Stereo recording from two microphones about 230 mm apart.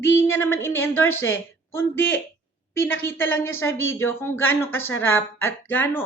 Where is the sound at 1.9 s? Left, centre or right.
Left.